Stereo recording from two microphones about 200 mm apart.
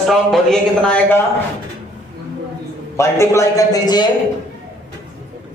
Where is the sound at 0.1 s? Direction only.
Centre (ahead or behind).